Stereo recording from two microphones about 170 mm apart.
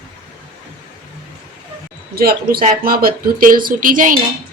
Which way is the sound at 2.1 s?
60° right (ahead or behind).